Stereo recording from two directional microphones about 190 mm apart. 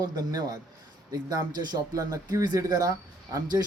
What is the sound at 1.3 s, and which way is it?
Speech, 20° right (ahead or behind).